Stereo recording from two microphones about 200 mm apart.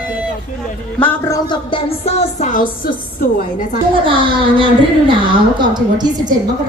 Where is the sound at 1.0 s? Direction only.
15° left (ahead or behind); by 3.0 s 45° left (ahead or behind).